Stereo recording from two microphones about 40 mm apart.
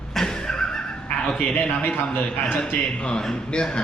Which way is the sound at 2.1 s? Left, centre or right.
Left.